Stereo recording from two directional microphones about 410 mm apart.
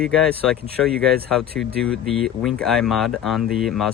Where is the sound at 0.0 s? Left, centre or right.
Centre.